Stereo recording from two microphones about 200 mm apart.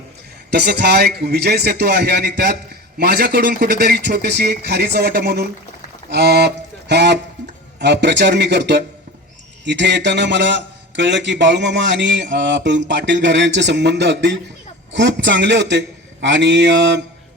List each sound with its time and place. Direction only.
0.5 s a man's voice: 55° right (ahead or behind)
6.1 s a sound: 55° right (ahead or behind)
7.8 s a man's voice: 60° right (ahead or behind)